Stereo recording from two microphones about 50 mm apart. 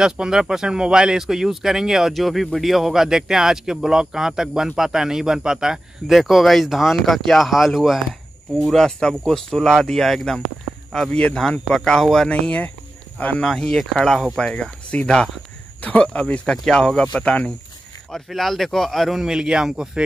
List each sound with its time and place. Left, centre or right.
0.0 s speech: centre
11.1 s speech: left
11.7 s speech: centre
12.3 s speech: left
13.5 s speech: centre
14.4 s speech: left
18.3 s speech: centre
19.2 s speech: centre